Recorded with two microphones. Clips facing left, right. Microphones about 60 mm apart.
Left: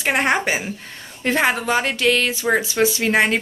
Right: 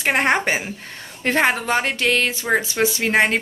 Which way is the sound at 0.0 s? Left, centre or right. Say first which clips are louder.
Even; right.